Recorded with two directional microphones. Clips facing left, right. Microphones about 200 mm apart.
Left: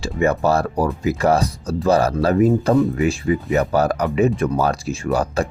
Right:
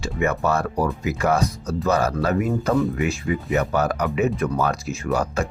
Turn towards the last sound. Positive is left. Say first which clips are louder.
# left 3 dB
turn(degrees=30)  # may be behind; listen again after turning